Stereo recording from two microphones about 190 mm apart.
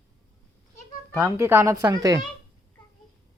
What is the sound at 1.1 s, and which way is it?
Speech, 15° right (ahead or behind).